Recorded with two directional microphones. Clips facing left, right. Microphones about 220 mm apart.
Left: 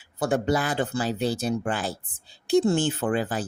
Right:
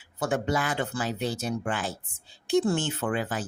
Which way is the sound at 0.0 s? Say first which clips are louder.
Left 3 dB; 35° left (ahead or behind).